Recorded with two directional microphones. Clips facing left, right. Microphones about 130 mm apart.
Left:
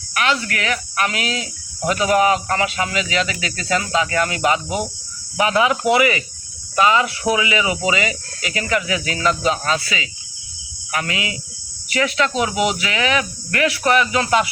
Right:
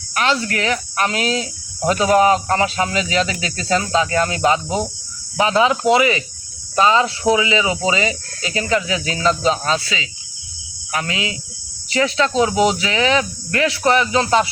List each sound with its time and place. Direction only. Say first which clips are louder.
0.1 s speech: right 2 dB; 30° right (ahead or behind)